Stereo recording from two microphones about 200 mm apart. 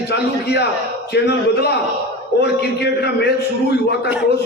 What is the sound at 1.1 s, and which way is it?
A man's voice, 55° left (ahead or behind).